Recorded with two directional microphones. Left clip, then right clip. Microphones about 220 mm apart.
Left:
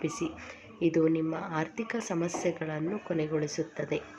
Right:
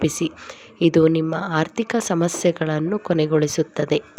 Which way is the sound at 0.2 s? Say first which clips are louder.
Right 10 dB; 45° right (ahead or behind).